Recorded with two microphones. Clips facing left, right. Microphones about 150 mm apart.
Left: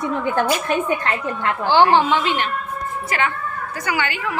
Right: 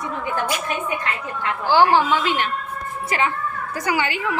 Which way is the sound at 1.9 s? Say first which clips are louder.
Left 2 dB; 20° left (ahead or behind).